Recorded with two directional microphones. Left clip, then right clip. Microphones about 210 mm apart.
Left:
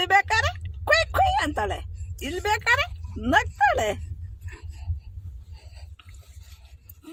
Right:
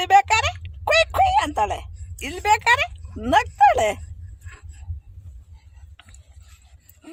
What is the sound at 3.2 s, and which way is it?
Speech, 30° right (ahead or behind).